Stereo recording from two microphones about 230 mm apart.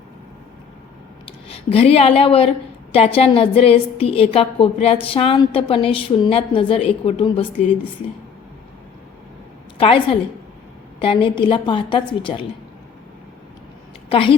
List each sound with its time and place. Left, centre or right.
1.2 s a woman's voice: left
9.7 s a woman's voice: left
14.1 s a woman's voice: left